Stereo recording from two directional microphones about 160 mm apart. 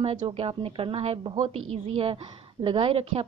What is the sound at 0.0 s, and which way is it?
A woman's voice, 35° right (ahead or behind).